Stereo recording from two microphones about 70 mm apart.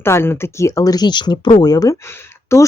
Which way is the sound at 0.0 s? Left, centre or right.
Left.